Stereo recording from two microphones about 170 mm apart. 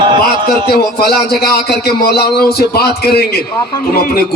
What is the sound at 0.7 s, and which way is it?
A man's voice, 70° left (ahead or behind).